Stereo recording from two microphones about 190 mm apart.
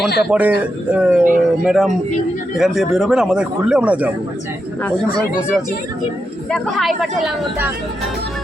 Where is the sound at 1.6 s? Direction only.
Centre (ahead or behind).